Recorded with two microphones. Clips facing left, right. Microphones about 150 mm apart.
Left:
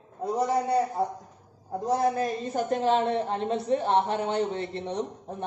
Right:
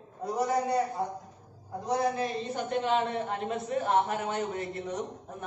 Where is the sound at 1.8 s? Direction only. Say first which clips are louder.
Left 3 dB; 45° left (ahead or behind); by 5.0 s 30° left (ahead or behind).